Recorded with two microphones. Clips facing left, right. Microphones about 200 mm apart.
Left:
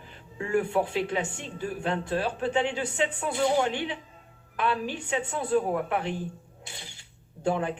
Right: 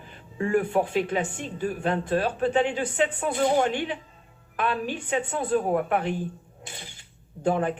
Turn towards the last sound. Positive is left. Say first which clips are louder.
# right 3 dB
turn(degrees=-50)  # may be behind; listen again after turning